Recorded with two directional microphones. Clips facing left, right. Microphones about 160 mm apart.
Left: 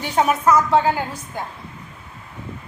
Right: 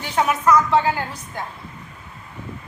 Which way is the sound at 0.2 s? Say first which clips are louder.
Left 1 dB; 25° left (ahead or behind).